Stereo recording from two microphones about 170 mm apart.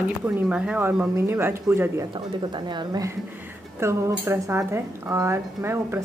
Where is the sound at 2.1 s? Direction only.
25° right (ahead or behind).